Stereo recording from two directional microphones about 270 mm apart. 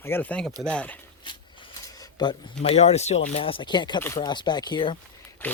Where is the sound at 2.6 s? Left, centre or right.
Left.